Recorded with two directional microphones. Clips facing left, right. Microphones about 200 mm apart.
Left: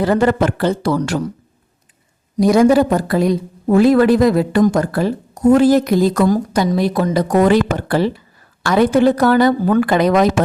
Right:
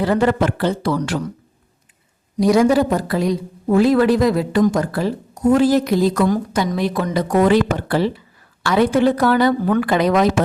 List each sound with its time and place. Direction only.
0.0 s a woman's voice: 45° left (ahead or behind)
2.4 s a woman's voice: 50° left (ahead or behind)